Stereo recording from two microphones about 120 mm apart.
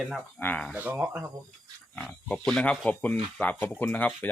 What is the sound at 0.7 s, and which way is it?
Speech, 15° right (ahead or behind).